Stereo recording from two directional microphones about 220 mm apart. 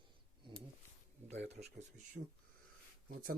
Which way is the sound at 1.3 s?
30° right (ahead or behind).